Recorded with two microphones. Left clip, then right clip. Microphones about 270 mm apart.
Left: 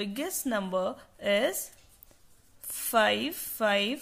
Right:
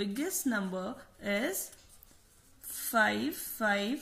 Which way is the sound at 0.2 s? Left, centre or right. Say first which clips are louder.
Left 4 dB; left.